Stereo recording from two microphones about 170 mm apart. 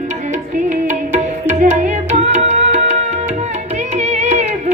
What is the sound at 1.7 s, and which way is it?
Music, 40° right (ahead or behind).